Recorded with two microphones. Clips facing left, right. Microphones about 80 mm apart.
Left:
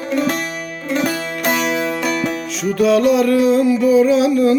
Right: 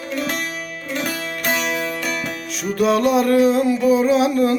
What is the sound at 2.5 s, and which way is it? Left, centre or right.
Music, right.